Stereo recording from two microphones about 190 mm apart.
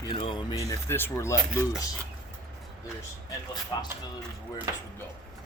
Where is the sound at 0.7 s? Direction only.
10° left (ahead or behind).